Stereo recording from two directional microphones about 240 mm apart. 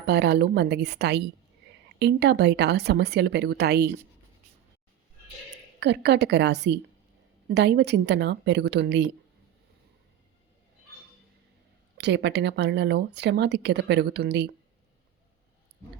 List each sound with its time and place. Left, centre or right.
0.0 s speech: right
5.8 s speech: right
11.9 s speech: right